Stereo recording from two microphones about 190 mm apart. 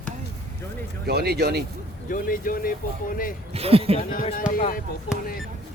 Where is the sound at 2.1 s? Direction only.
45° left (ahead or behind).